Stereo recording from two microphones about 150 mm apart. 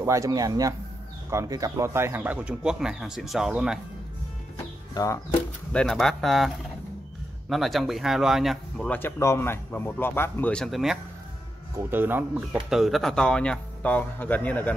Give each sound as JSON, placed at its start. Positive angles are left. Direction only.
{"t": 0.0, "sound": "speech", "side_deg": -20}
{"t": 4.9, "sound": "speech", "side_deg": 20}
{"t": 5.7, "sound": "speech", "side_deg": 5}
{"t": 11.9, "sound": "speech", "side_deg": -15}